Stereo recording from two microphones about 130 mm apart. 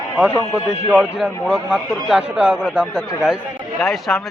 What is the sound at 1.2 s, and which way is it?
A man's voice, 5° right (ahead or behind).